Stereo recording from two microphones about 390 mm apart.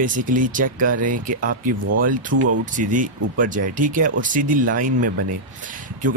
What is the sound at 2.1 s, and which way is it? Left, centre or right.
Speech, right.